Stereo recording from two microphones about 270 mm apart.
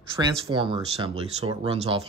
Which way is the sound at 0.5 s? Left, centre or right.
Centre.